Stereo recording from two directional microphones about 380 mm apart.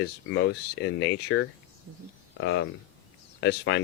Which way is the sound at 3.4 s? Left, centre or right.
Left.